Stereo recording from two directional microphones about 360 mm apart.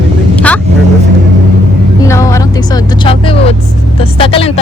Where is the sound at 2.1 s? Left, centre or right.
Centre.